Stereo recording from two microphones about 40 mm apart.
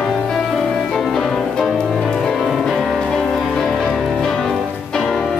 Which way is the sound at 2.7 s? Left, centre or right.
Centre.